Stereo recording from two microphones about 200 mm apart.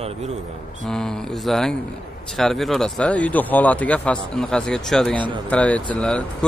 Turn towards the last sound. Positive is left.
turn(degrees=5)  # may be behind; listen again after turning